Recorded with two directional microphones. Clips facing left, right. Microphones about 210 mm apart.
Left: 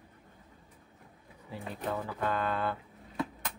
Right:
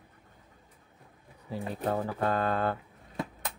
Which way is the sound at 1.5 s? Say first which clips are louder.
Right 5 dB; 40° right (ahead or behind).